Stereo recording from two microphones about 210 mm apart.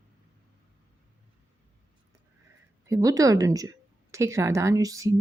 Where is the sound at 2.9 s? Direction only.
15° right (ahead or behind).